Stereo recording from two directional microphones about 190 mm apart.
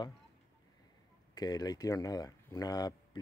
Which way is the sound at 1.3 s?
20° left (ahead or behind).